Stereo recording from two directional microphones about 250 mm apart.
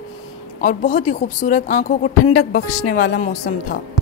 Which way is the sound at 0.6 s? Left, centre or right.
Left.